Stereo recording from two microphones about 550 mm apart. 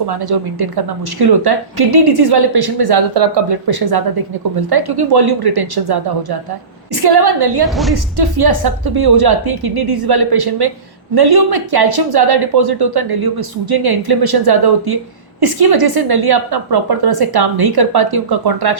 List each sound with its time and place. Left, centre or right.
0.1 s a woman's voice: right
7.6 s a woman's voice: centre
8.1 s speech: right